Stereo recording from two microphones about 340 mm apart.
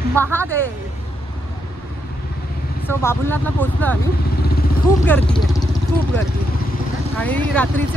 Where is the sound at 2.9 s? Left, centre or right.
Centre.